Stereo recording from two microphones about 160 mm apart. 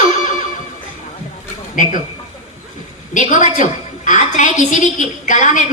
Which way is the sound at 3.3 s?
55° left (ahead or behind).